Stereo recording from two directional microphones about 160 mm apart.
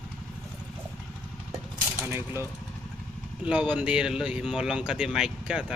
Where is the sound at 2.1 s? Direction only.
15° right (ahead or behind).